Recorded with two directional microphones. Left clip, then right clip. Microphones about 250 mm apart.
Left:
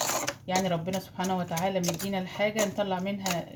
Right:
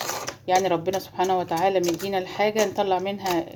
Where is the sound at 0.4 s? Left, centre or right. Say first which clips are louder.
Right 10 dB; right.